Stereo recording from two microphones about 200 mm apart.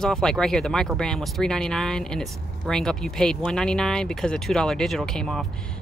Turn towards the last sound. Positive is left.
turn(degrees=0)  # may be behind; listen again after turning